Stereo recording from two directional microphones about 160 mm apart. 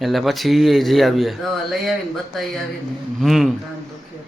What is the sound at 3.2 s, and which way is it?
Speech, centre (ahead or behind).